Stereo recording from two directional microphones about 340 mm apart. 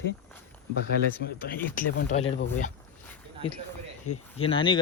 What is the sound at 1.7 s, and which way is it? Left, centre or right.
Speech, centre.